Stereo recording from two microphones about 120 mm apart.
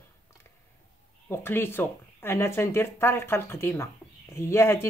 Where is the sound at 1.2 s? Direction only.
20° left (ahead or behind).